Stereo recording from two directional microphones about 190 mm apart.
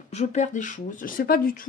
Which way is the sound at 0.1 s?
35° left (ahead or behind).